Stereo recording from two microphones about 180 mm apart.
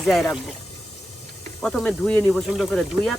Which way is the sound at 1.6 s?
Centre (ahead or behind).